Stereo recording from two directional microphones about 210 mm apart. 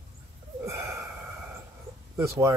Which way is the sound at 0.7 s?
15° right (ahead or behind).